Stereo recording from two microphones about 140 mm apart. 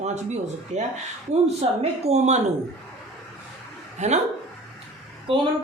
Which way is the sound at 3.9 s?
55° right (ahead or behind).